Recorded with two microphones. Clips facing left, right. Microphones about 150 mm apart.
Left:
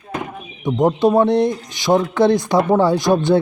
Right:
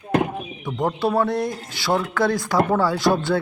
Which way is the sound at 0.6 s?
20° left (ahead or behind).